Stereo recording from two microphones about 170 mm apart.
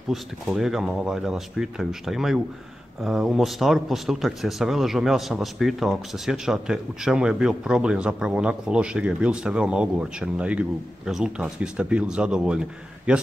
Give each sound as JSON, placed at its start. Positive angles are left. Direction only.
{"t": 0.1, "sound": "speech", "side_deg": 0}